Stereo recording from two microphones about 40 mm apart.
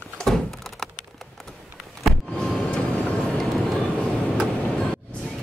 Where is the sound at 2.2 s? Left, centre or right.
Centre.